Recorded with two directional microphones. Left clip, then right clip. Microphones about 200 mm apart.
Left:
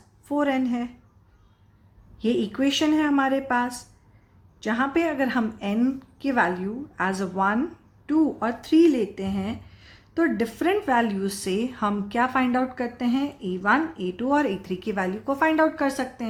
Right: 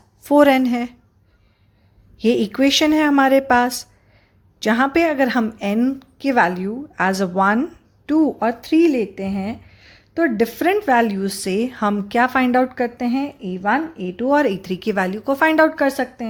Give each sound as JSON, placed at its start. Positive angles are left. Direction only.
{"t": 0.3, "sound": "a woman's voice", "side_deg": -45}
{"t": 2.1, "sound": "a woman's voice", "side_deg": -40}